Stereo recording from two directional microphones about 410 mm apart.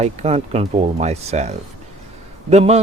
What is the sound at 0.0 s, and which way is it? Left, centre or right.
Speech, centre.